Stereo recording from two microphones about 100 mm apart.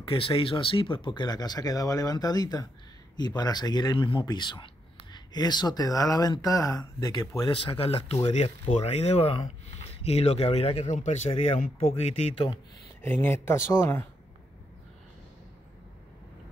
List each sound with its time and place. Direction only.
0.1 s speech: 60° left (ahead or behind); by 7.4 s 40° left (ahead or behind)
7.4 s speech: 60° left (ahead or behind); by 10.9 s 90° left
11.3 s speech: 80° left
13.0 s speech: 20° left (ahead or behind)